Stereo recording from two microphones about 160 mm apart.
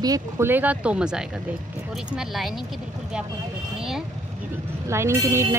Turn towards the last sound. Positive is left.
turn(degrees=-15)  # may be behind; listen again after turning